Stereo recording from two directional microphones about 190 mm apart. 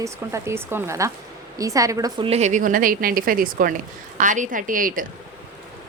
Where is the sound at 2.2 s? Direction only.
35° right (ahead or behind).